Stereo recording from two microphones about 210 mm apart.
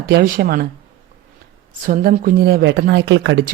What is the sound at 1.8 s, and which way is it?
Speech, 40° right (ahead or behind).